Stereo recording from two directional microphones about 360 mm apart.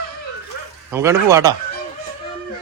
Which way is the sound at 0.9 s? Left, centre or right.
Centre.